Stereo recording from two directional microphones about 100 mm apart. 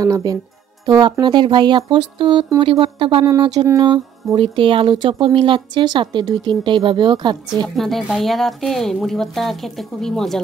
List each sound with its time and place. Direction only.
0.0 s speech: 35° right (ahead or behind); by 3.3 s 55° right (ahead or behind)
3.3 s speech: 40° right (ahead or behind)
4.4 s speech: 60° right (ahead or behind)
7.6 s speech: centre (ahead or behind)